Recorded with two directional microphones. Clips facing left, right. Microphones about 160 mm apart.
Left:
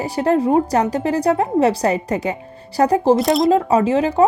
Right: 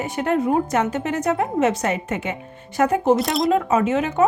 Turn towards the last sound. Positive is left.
turn(degrees=30)  # may be behind; listen again after turning